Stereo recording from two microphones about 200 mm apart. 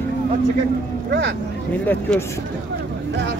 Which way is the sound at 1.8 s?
5° left (ahead or behind).